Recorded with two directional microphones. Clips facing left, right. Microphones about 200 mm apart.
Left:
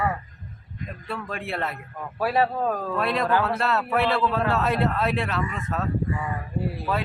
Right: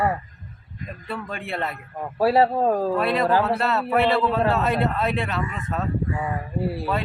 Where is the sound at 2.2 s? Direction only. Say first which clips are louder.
Right 5 dB; 30° right (ahead or behind).